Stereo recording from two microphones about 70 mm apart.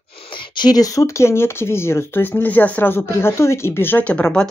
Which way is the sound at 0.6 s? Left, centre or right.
Left.